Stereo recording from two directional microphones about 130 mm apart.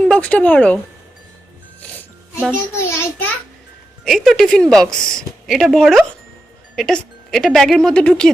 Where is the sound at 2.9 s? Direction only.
20° left (ahead or behind).